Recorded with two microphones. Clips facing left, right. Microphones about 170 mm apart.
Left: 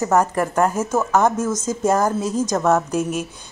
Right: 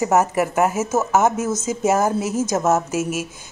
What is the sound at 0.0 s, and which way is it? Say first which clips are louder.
A woman's voice: even; 10° right (ahead or behind).